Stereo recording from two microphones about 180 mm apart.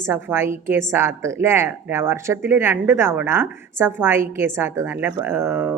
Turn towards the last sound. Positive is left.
turn(degrees=-10)  # may be behind; listen again after turning